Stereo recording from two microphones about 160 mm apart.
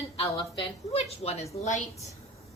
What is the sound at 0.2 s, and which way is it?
A woman's voice, 35° left (ahead or behind).